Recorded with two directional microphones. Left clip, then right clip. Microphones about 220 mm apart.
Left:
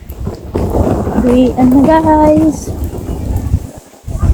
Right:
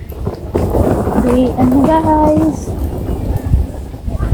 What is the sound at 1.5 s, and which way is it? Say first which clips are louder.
A child's voice: left 3 dB; 35° left (ahead or behind).